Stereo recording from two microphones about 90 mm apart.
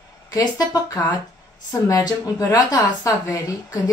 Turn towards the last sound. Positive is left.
turn(degrees=40)  # may be behind; listen again after turning